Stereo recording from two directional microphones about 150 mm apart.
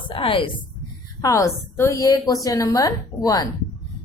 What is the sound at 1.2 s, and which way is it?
A woman's voice, 20° left (ahead or behind).